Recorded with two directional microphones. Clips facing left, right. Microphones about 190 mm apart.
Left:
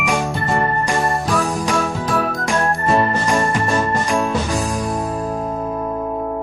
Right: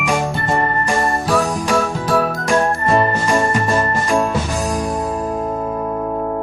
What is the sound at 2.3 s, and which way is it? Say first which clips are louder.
Music: right 3 dB; centre (ahead or behind).